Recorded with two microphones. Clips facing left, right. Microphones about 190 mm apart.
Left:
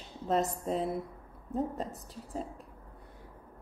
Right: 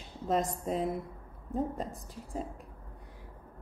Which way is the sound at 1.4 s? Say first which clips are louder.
Even; 10° right (ahead or behind).